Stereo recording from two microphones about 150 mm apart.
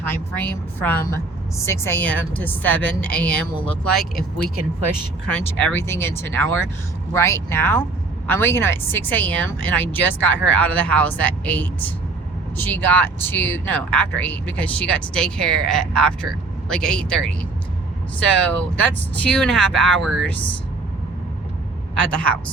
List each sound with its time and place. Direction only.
0.3 s speech: 10° left (ahead or behind)
5.3 s speech: 10° left (ahead or behind)
18.3 s speech: 10° left (ahead or behind)
21.9 s speech: 10° left (ahead or behind)